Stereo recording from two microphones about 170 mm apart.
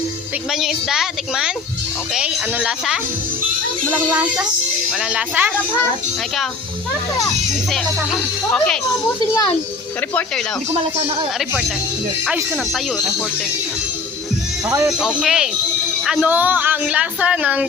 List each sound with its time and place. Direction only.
0.5 s speech: centre (ahead or behind)
4.9 s speech: 5° right (ahead or behind)
7.7 s speech: 5° left (ahead or behind)
9.2 s a child's voice: 20° left (ahead or behind)
12.2 s speech: 5° right (ahead or behind)
14.8 s speech: 5° right (ahead or behind)